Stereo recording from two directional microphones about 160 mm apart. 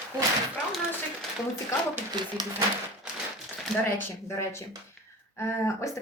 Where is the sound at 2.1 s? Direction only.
25° right (ahead or behind).